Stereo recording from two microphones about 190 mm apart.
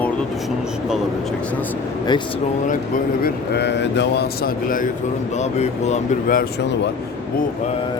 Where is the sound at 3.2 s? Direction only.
65° left (ahead or behind); by 6.4 s 40° left (ahead or behind).